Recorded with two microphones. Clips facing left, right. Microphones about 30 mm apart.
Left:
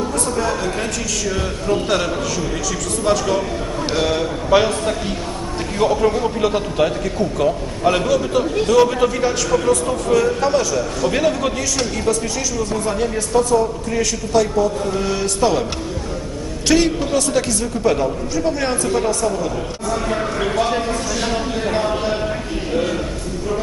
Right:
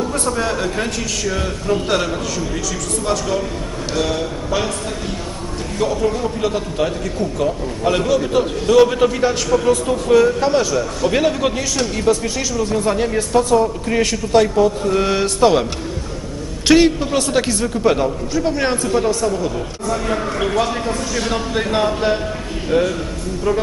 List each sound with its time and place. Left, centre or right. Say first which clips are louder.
0.3 s a man's voice: even; centre
3.1 s a man's voice: left 3 dB; centre
4.5 s a man's voice: left 8 dB; left; by 13.5 s centre
13.5 s a man's voice: right 2 dB; right
16.6 s a man's voice: right 4 dB; right
17.9 s a man's voice: right 1 dB; centre